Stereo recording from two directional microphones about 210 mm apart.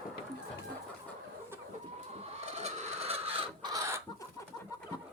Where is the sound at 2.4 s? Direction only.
30° right (ahead or behind); by 4.0 s 15° right (ahead or behind).